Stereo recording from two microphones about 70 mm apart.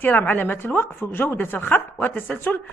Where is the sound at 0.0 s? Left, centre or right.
Left.